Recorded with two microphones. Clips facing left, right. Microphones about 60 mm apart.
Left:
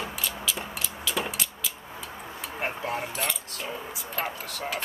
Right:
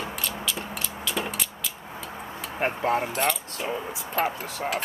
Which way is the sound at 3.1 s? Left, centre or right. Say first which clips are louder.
Right 6 dB; centre.